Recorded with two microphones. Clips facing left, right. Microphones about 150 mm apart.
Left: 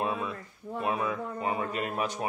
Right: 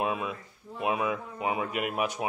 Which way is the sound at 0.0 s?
10° right (ahead or behind).